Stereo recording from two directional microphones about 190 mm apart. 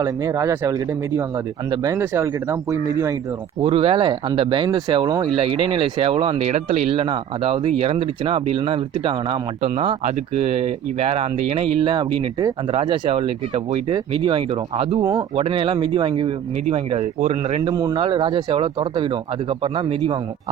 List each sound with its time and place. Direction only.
0.0 s speech: 15° right (ahead or behind)
3.6 s speech: 30° right (ahead or behind)
17.7 s speech: 20° right (ahead or behind)